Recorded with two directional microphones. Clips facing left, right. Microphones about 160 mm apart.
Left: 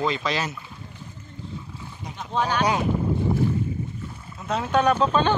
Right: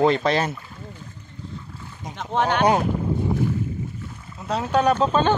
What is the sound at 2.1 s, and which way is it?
Speech, 75° right (ahead or behind).